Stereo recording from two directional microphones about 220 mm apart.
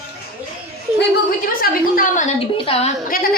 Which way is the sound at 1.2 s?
40° left (ahead or behind).